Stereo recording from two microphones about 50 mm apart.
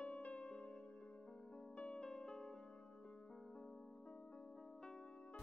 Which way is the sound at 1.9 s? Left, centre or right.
Centre.